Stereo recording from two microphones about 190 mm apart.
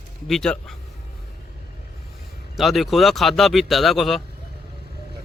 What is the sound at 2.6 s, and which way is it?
Speech, centre (ahead or behind).